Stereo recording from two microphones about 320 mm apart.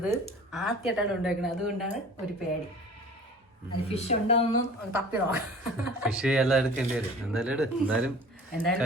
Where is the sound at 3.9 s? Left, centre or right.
Centre.